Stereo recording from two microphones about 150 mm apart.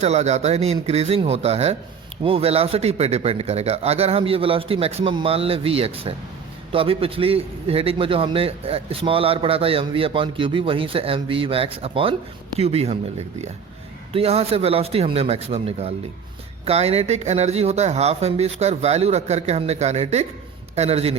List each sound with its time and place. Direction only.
0.0 s a man's voice: 50° right (ahead or behind)
14.1 s a man's voice: 40° right (ahead or behind)